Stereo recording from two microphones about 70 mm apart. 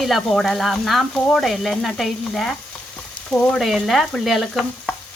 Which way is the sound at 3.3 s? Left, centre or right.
Left.